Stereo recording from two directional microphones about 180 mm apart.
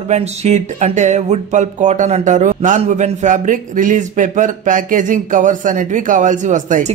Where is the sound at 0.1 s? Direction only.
40° right (ahead or behind).